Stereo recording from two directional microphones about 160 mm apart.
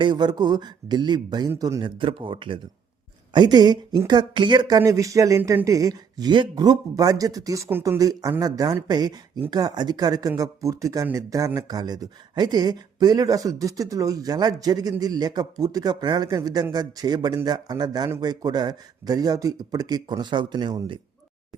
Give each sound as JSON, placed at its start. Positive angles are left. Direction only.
{"t": 0.0, "sound": "speech", "side_deg": -30}